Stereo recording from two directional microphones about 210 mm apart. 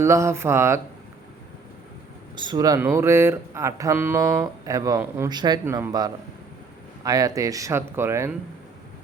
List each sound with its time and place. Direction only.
0.0 s speech: 15° right (ahead or behind)
2.3 s speech: 20° right (ahead or behind)